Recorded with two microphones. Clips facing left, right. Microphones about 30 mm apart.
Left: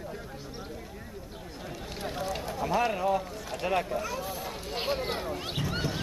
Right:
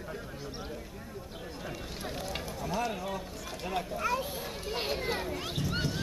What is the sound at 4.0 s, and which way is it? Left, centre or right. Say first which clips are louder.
Speech: right 1 dB; right.